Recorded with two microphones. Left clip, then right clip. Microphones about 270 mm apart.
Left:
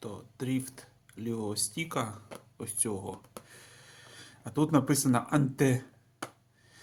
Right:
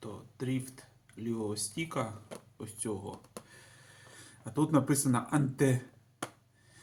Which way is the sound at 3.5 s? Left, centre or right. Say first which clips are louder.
Left 3 dB; left.